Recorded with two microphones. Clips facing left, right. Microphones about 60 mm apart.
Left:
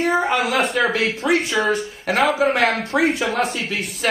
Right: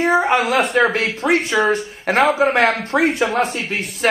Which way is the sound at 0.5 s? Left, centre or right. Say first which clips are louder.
Right 2 dB; centre.